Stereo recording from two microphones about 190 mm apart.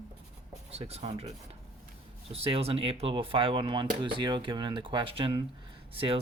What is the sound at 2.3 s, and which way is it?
Speech, 30° right (ahead or behind).